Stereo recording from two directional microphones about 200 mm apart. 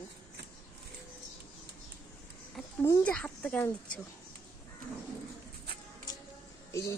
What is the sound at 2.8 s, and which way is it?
Speech, 10° left (ahead or behind).